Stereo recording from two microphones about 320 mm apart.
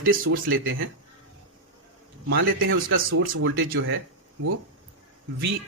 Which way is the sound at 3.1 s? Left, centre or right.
Right.